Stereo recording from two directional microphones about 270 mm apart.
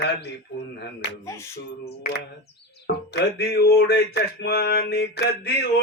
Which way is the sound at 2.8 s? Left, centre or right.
Left.